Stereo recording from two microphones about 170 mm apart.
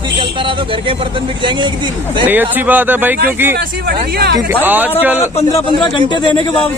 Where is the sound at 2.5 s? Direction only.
10° right (ahead or behind).